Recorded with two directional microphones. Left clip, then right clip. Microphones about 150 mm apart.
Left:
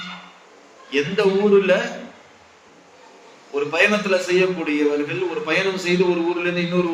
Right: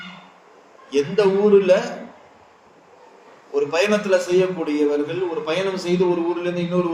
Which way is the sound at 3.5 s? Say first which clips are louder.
Left 1 dB; 45° right (ahead or behind).